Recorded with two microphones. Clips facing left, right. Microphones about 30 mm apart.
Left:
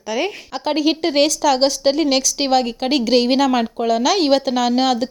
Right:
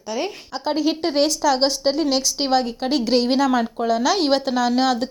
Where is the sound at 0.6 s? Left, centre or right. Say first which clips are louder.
Left 3 dB; left.